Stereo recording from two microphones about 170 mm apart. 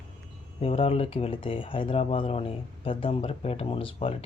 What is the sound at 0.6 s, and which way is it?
Speech, 35° left (ahead or behind).